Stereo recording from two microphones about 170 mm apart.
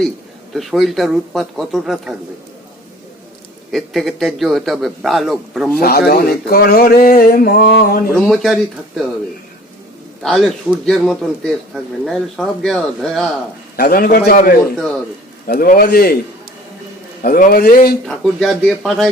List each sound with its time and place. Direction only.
0.5 s speech: centre (ahead or behind)
3.7 s speech: centre (ahead or behind)
5.8 s speech: 65° left (ahead or behind)
8.3 s speech: centre (ahead or behind)
10.2 s speech: centre (ahead or behind)
13.7 s speech: 60° left (ahead or behind)
17.2 s speech: 55° left (ahead or behind)
18.0 s speech: centre (ahead or behind)